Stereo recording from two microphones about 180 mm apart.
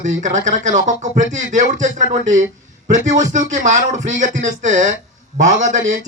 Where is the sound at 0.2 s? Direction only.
45° right (ahead or behind).